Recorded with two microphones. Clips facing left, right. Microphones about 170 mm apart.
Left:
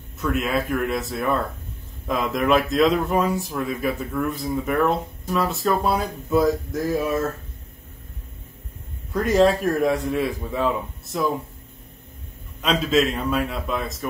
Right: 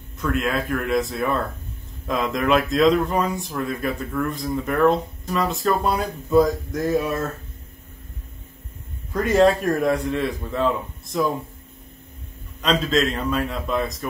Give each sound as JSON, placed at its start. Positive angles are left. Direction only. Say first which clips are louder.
{"t": 0.2, "sound": "speech", "louder": "even", "side_deg": 5}
{"t": 9.1, "sound": "speech", "louder": "right 1 dB", "side_deg": 0}
{"t": 12.6, "sound": "speech", "louder": "even", "side_deg": 5}